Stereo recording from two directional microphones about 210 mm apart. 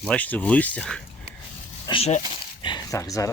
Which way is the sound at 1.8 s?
25° left (ahead or behind).